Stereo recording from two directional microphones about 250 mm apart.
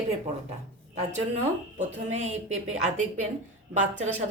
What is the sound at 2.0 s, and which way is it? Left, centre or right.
A woman's voice, right.